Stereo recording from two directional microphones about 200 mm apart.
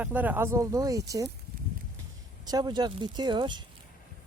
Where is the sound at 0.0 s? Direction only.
10° right (ahead or behind).